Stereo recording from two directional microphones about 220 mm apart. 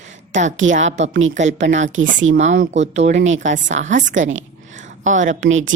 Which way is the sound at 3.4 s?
35° right (ahead or behind).